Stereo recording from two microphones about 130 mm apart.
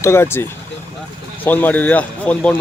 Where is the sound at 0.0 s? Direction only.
20° left (ahead or behind).